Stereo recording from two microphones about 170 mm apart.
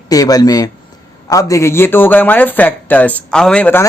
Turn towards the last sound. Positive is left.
turn(degrees=10)  # may be behind; listen again after turning